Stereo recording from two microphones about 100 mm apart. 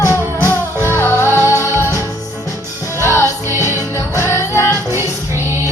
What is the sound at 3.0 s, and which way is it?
Music, 30° left (ahead or behind).